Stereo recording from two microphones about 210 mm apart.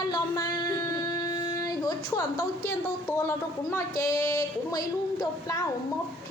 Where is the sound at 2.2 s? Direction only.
15° left (ahead or behind).